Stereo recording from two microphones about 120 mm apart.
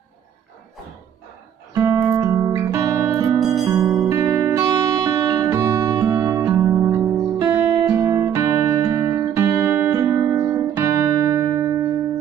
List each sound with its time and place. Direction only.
1.9 s music: 30° right (ahead or behind)
3.3 s music: centre (ahead or behind)
3.6 s music: 30° right (ahead or behind)
7.8 s music: 35° right (ahead or behind)